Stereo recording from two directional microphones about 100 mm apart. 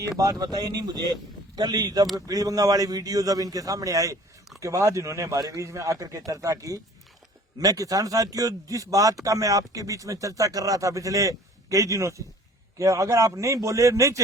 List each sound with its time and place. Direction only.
0.2 s speech: 35° right (ahead or behind)